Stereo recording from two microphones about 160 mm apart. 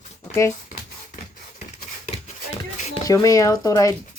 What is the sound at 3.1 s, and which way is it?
Speech, 20° left (ahead or behind).